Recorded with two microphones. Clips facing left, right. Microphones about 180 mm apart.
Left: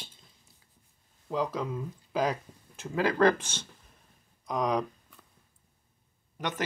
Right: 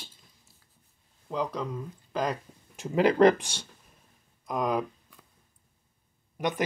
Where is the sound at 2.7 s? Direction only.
20° right (ahead or behind).